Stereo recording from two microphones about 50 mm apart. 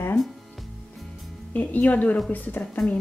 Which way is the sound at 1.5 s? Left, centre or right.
Left.